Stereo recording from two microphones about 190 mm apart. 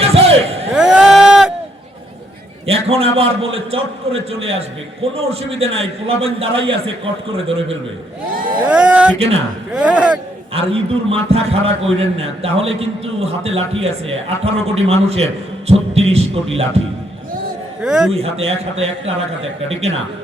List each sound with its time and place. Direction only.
0.0 s slam: 30° right (ahead or behind)
0.7 s a sound: 5° right (ahead or behind)
2.6 s a man's voice: 30° right (ahead or behind)
8.6 s speech: 5° right (ahead or behind)
9.1 s a man's voice: 30° right (ahead or behind)
9.7 s speech: 5° right (ahead or behind)
10.5 s a man's voice: 30° right (ahead or behind)
17.8 s speech: 5° right (ahead or behind)
18.1 s a man's voice: 30° right (ahead or behind)